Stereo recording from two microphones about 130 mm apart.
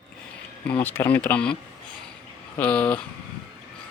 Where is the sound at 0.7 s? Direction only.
15° left (ahead or behind).